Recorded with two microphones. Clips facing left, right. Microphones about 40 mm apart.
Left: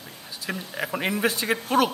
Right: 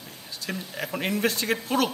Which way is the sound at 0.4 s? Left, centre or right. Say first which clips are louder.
Left 2 dB; centre.